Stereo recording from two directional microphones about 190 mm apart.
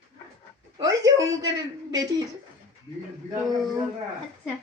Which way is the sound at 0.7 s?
20° right (ahead or behind).